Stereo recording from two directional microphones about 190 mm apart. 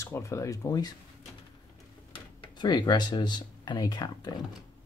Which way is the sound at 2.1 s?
25° left (ahead or behind).